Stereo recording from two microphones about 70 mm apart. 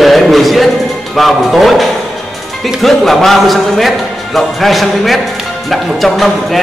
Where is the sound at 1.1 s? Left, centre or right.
Centre.